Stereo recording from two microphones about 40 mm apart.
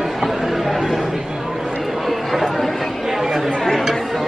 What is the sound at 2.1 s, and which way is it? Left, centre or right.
Chatter, centre.